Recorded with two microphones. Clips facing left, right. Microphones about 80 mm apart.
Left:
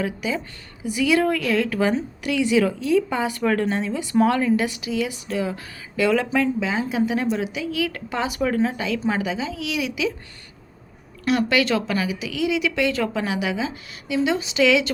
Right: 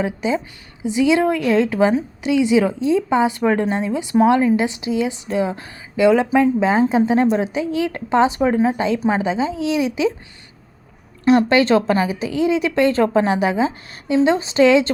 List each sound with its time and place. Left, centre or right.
0.0 s a woman's voice: right
6.6 s a woman's voice: right
11.3 s a woman's voice: right